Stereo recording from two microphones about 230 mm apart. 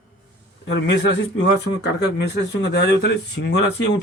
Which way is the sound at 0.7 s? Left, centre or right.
Left.